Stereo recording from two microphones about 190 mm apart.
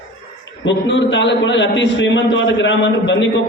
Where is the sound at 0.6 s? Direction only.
75° left (ahead or behind).